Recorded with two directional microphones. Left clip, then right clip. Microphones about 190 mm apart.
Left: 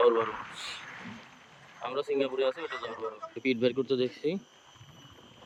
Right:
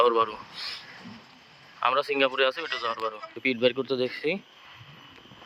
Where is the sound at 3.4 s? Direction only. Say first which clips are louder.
Right 4 dB; 5° left (ahead or behind).